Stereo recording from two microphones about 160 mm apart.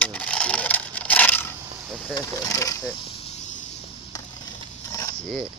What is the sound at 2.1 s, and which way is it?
Speech, 20° left (ahead or behind).